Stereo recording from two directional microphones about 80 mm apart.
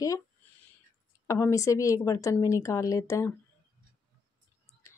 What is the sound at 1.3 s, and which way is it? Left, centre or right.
Speech, left.